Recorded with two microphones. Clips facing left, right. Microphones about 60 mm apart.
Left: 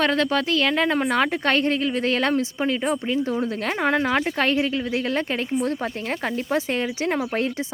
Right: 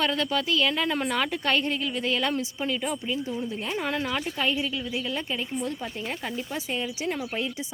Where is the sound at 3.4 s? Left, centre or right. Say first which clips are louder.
Left 6 dB; left.